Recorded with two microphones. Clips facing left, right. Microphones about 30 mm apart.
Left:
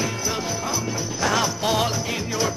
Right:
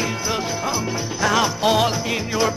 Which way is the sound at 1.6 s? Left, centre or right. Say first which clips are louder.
Right 6 dB; right.